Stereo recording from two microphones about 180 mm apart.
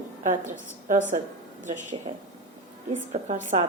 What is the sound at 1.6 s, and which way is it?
Speech, 45° right (ahead or behind).